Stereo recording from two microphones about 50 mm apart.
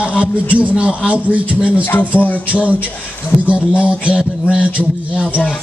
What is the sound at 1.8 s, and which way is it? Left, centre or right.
Speech, left.